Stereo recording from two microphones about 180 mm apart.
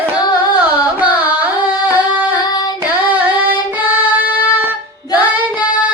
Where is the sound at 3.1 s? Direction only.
10° right (ahead or behind).